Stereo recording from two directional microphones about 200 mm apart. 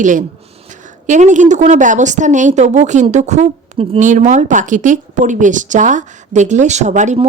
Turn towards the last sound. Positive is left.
turn(degrees=-35)  # may be behind; listen again after turning